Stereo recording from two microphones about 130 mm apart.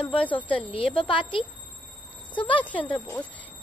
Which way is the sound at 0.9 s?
40° left (ahead or behind).